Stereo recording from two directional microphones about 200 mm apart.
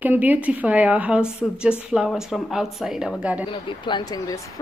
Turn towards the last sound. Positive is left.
turn(degrees=20)  # may be behind; listen again after turning